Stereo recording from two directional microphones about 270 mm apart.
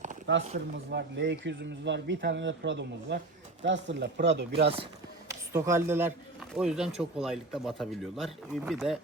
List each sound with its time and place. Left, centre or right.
0.4 s speech: right
0.9 s speech: right
5.3 s speech: centre